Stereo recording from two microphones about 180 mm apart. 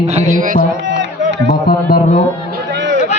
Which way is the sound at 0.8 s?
80° right.